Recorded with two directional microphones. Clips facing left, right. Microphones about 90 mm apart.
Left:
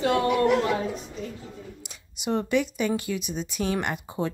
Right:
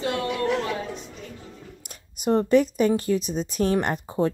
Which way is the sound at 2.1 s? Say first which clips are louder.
Right 6 dB; 40° right (ahead or behind).